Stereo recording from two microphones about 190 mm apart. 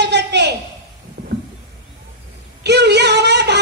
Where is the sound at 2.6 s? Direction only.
60° right (ahead or behind).